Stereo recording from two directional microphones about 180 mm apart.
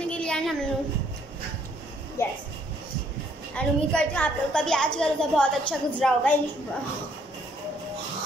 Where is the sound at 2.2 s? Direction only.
15° left (ahead or behind).